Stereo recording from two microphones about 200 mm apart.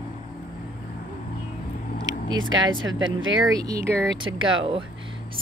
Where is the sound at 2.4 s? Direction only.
75° right (ahead or behind).